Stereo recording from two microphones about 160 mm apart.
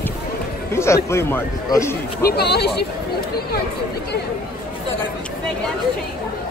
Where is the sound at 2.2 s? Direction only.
90° left.